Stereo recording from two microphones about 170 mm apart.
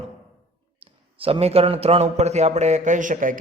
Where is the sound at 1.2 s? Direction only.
35° right (ahead or behind).